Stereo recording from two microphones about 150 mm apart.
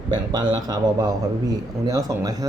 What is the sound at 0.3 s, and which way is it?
A man's voice, 30° right (ahead or behind).